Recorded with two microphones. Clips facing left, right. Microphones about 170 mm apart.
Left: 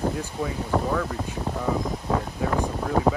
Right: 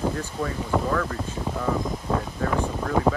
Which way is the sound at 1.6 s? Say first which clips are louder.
Even; 10° left (ahead or behind).